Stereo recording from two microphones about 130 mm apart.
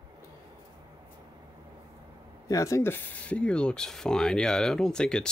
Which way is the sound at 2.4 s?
25° left (ahead or behind).